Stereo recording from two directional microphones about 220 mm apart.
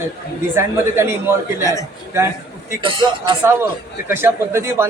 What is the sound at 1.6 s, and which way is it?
Speech, 15° left (ahead or behind).